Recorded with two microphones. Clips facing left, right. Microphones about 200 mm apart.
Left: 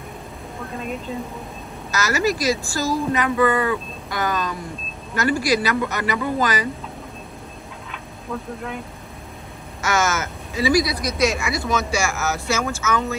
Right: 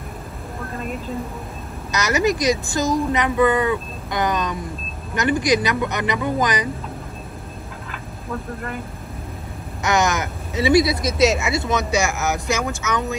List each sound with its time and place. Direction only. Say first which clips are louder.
0.7 s speech: even; centre (ahead or behind)
1.9 s a woman's voice: right 2 dB; 20° right (ahead or behind)
9.8 s a woman's voice: right 2 dB; 15° right (ahead or behind)